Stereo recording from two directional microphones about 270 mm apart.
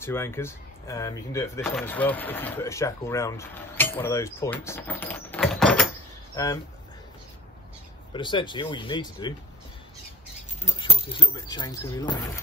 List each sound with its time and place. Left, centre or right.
0.0 s speech: centre
8.1 s speech: centre
10.8 s speech: centre